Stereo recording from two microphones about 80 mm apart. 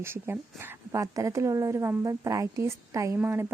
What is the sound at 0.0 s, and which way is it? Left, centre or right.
A woman's voice, right.